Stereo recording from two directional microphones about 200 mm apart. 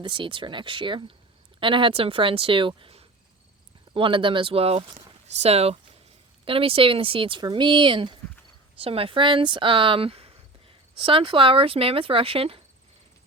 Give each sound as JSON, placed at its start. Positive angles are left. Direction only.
{"t": 0.0, "sound": "speech", "side_deg": -25}